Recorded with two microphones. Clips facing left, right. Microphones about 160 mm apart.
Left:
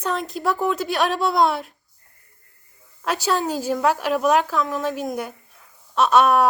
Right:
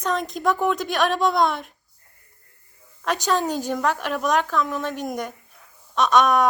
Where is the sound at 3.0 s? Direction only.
5° left (ahead or behind).